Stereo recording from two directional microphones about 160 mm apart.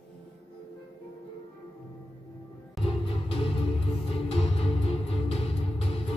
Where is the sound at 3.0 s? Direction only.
35° left (ahead or behind).